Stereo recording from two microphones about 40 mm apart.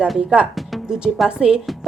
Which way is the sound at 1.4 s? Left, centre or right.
Right.